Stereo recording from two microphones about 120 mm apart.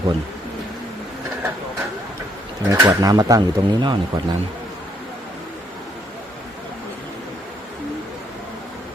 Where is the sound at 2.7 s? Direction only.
30° right (ahead or behind).